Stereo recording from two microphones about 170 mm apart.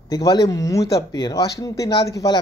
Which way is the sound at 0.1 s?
20° left (ahead or behind).